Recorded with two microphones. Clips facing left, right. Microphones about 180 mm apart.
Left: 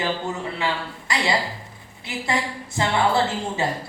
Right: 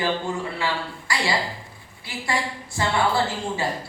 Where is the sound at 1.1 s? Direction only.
20° left (ahead or behind).